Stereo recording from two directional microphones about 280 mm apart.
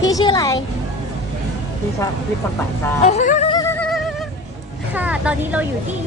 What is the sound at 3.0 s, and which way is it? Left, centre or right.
Music, left.